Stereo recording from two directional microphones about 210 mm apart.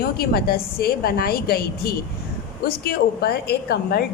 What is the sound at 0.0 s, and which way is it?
A woman's voice, 45° left (ahead or behind).